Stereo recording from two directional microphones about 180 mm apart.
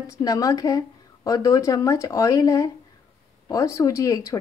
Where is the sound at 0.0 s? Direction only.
20° left (ahead or behind).